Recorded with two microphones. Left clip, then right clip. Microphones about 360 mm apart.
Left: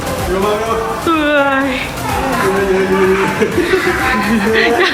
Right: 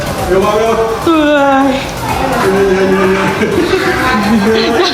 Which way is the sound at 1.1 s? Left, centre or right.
Centre.